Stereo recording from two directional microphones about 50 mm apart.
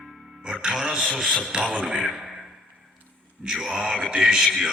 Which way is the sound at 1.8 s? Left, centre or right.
Centre.